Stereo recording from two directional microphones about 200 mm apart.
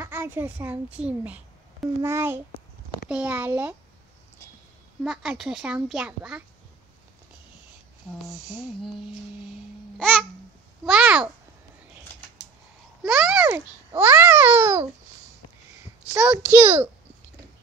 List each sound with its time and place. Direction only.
0.0 s a child's voice: 10° right (ahead or behind)
5.0 s a child's voice: 5° right (ahead or behind)
8.3 s a child's voice: centre (ahead or behind)
9.9 s babbling: 5° left (ahead or behind)
10.9 s a child's voice: 5° right (ahead or behind)
13.0 s a child's voice: 5° right (ahead or behind)
16.1 s a child's voice: 5° right (ahead or behind)